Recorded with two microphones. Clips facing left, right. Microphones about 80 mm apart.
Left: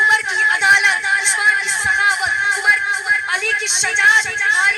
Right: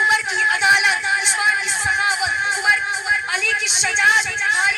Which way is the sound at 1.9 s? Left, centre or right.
Left.